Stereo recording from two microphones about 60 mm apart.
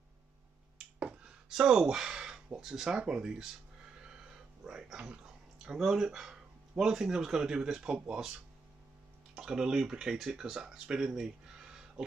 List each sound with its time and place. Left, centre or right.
0.9 s finger snapping: right
1.5 s speech: centre
9.3 s speech: centre